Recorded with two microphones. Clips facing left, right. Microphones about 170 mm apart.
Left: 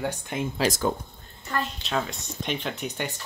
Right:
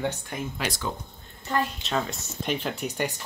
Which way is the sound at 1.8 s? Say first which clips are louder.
Even; centre (ahead or behind).